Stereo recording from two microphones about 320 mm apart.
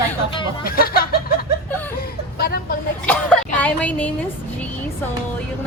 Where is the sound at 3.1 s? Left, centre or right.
Centre.